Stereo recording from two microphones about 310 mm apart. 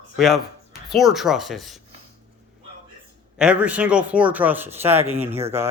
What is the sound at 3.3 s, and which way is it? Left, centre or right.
A man's voice, centre.